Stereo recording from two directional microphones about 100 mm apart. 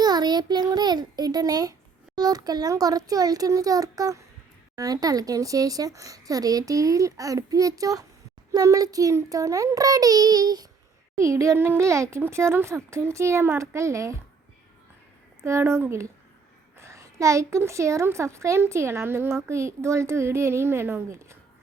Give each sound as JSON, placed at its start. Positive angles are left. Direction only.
{"t": 0.0, "sound": "a sound", "side_deg": -45}
{"t": 2.1, "sound": "speech", "side_deg": -40}
{"t": 11.2, "sound": "a woman's voice", "side_deg": -30}
{"t": 15.4, "sound": "a woman's voice", "side_deg": -30}